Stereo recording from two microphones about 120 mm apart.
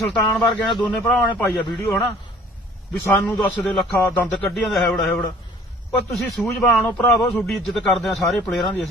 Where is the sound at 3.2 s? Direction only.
15° left (ahead or behind).